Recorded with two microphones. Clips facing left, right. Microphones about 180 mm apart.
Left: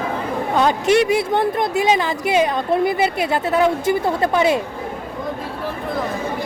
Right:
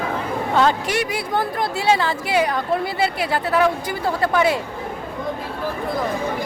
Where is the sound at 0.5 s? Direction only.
20° left (ahead or behind).